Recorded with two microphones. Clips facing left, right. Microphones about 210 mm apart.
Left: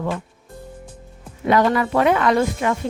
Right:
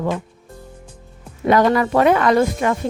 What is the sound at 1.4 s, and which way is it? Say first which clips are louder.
A woman's voice: right 2 dB; 40° right (ahead or behind).